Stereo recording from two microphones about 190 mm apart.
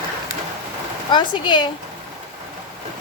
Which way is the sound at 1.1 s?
25° left (ahead or behind).